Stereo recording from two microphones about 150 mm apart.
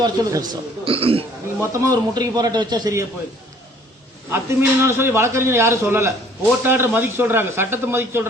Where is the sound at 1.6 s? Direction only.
20° right (ahead or behind).